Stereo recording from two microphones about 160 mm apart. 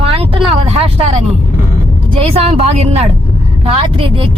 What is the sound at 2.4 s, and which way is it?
Speech, 40° right (ahead or behind).